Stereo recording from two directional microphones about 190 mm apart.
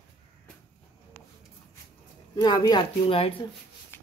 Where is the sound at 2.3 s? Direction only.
20° left (ahead or behind).